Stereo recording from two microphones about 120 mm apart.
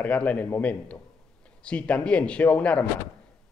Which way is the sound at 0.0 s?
10° left (ahead or behind).